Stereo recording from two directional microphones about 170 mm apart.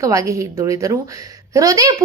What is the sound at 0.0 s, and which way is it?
A woman's voice, 20° right (ahead or behind).